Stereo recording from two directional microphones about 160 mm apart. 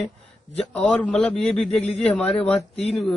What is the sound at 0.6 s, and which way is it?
Speech, 10° left (ahead or behind).